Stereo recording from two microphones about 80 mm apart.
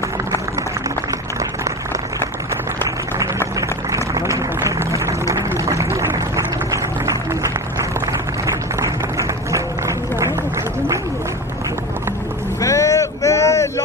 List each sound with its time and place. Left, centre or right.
3.2 s a sound: right
9.5 s run: right
12.5 s vehicle: left